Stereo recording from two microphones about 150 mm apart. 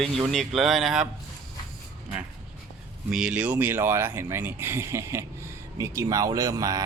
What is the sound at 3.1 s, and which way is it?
Speech, 5° right (ahead or behind).